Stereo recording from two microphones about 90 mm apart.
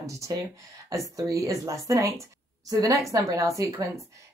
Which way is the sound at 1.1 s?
35° right (ahead or behind).